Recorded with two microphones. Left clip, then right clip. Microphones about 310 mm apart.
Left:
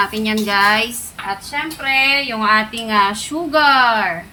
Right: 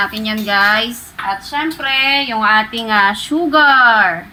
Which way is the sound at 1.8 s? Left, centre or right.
Right.